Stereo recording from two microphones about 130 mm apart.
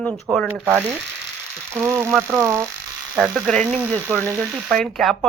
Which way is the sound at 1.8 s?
20° right (ahead or behind).